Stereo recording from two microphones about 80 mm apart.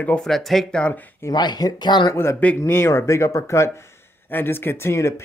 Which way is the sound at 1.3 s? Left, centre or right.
Left.